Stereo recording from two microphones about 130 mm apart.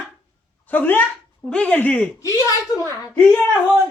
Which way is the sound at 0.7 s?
15° left (ahead or behind).